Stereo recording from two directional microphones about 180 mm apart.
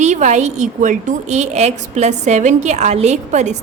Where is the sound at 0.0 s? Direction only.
40° right (ahead or behind).